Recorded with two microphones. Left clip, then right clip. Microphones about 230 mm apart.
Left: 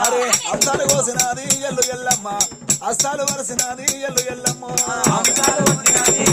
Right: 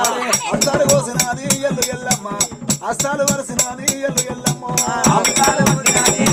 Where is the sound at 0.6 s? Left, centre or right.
Centre.